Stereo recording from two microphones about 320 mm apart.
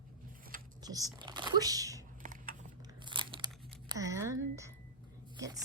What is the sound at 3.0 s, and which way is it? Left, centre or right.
Crunch, centre.